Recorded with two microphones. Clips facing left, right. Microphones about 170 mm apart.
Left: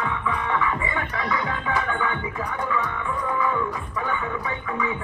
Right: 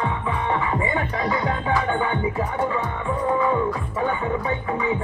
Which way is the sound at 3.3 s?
35° right (ahead or behind).